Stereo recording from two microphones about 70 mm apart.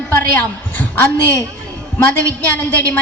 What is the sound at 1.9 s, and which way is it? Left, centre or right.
Speech, left.